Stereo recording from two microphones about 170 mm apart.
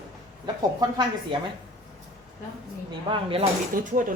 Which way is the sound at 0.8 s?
25° right (ahead or behind).